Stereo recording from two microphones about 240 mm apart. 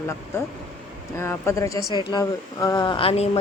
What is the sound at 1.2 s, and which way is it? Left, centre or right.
Speech, centre.